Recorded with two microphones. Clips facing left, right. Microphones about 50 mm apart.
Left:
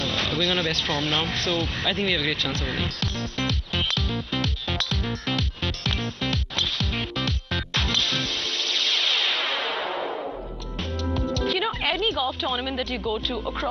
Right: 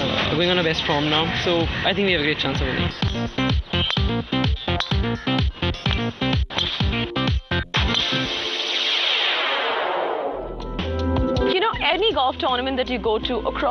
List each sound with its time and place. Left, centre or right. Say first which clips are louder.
0.0 s a sound: right 5 dB; centre
8.9 s music: right 3 dB; centre
10.8 s speech: right 5 dB; centre